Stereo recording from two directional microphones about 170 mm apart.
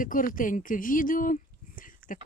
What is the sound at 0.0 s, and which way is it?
Speech, 50° left (ahead or behind).